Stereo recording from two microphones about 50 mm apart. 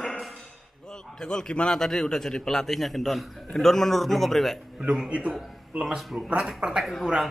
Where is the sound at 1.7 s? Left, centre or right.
Centre.